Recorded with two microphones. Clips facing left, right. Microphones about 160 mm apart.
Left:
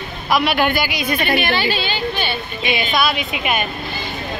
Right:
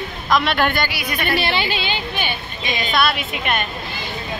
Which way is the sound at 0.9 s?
25° left (ahead or behind).